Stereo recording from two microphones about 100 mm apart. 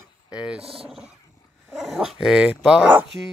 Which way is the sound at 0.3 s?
10° right (ahead or behind).